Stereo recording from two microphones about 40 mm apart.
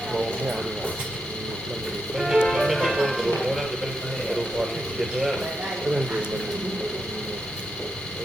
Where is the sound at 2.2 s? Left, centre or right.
Centre.